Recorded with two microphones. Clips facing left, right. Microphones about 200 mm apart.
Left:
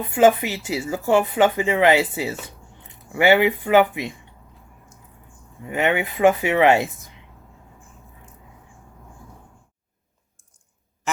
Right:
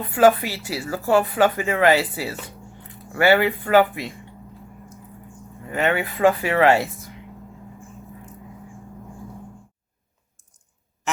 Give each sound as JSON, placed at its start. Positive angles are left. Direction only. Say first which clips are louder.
{"t": 0.0, "sound": "speech", "louder": "even", "side_deg": 20}
{"t": 5.6, "sound": "speech", "louder": "left 1 dB", "side_deg": 15}
{"t": 11.1, "sound": "duck", "louder": "even", "side_deg": 0}